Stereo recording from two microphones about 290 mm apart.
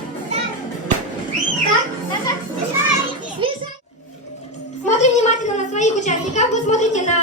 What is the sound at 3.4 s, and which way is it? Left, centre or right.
Children playing, centre.